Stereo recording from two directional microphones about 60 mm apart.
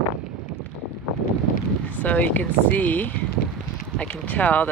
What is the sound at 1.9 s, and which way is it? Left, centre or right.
Speech, left.